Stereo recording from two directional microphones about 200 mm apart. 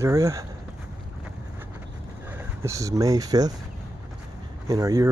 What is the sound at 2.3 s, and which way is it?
Speech, 15° right (ahead or behind).